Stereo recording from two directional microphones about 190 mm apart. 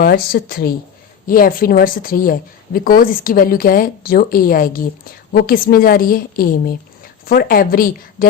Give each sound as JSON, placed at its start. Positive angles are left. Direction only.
{"t": 0.0, "sound": "a woman's voice", "side_deg": 55}